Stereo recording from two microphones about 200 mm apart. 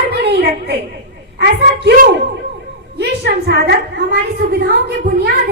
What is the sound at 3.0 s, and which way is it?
A woman's voice, 55° right (ahead or behind).